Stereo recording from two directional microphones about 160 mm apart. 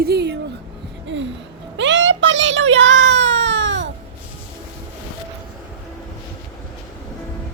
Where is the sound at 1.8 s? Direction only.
90° right.